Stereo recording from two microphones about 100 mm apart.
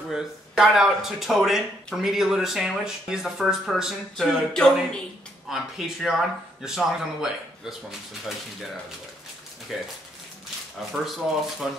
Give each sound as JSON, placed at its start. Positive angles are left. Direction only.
{"t": 0.1, "sound": "speech", "side_deg": -5}
{"t": 9.7, "sound": "speech", "side_deg": -5}
{"t": 10.9, "sound": "speech", "side_deg": 0}